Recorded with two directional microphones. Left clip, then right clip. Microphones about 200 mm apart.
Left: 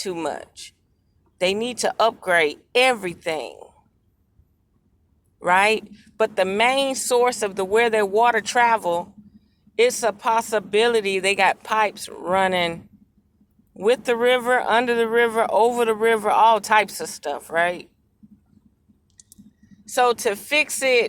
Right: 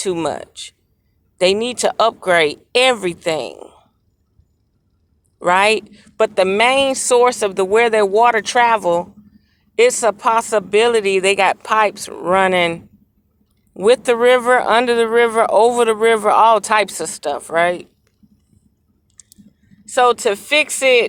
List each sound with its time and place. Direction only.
0.0 s speech: 30° right (ahead or behind)
5.4 s a woman's voice: 30° right (ahead or behind)
19.8 s a woman's voice: 25° right (ahead or behind)